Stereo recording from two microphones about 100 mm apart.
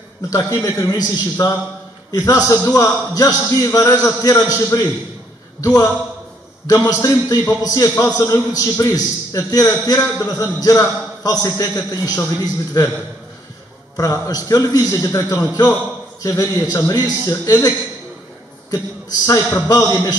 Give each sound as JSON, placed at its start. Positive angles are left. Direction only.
{"t": 0.5, "sound": "a man's voice", "side_deg": 30}
{"t": 13.9, "sound": "a man's voice", "side_deg": 35}